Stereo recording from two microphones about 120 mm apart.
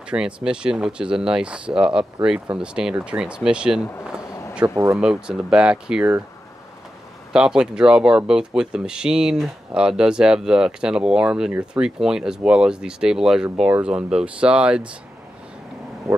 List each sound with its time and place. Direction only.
0.1 s speech: 5° right (ahead or behind)
4.6 s speech: 25° right (ahead or behind)
4.9 s speech: 5° right (ahead or behind)
7.3 s speech: 5° right (ahead or behind)